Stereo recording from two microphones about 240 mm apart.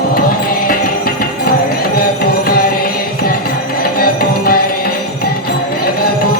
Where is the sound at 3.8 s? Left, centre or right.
Left.